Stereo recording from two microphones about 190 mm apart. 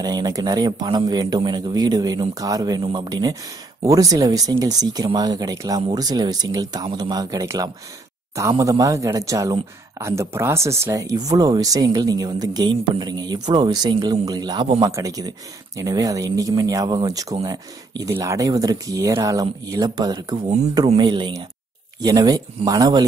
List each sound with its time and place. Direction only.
0.0 s speech: 20° right (ahead or behind)